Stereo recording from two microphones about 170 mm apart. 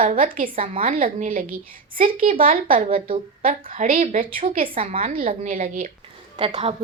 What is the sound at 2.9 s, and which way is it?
Speech, 30° right (ahead or behind).